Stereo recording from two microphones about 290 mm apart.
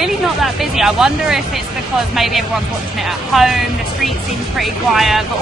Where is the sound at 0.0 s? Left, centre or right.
Centre.